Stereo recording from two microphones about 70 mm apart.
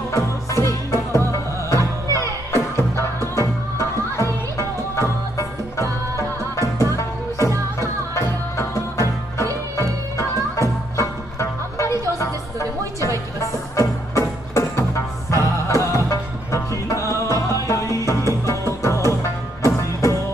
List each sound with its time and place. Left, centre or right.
0.1 s music: left